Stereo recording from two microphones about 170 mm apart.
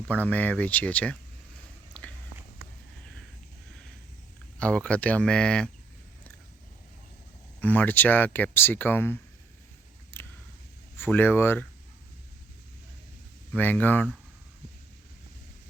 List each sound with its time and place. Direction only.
0.1 s speech: 10° left (ahead or behind)
4.6 s speech: 5° left (ahead or behind)
7.6 s speech: 10° left (ahead or behind)
10.1 s a sound: 15° left (ahead or behind)
10.9 s speech: 10° left (ahead or behind)
13.5 s speech: 10° left (ahead or behind)